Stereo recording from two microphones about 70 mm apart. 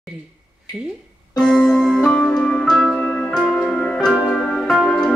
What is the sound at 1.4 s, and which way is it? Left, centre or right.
Music, centre.